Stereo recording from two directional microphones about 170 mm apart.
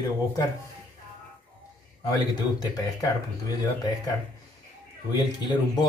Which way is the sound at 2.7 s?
20° left (ahead or behind).